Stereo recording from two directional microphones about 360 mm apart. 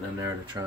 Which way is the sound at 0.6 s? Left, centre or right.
Centre.